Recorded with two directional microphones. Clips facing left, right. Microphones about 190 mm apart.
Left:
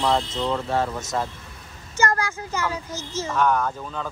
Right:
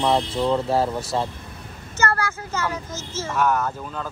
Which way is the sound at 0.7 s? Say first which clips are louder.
Right 3 dB; 35° right (ahead or behind).